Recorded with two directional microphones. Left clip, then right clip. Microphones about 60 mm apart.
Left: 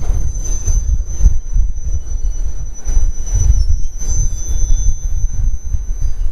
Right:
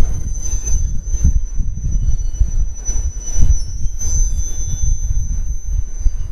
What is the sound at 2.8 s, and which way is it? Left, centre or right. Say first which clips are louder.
Train: right 4 dB; centre.